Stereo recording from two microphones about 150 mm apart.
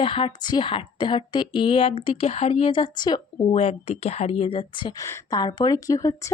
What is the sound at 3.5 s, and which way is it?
Speech, 45° left (ahead or behind).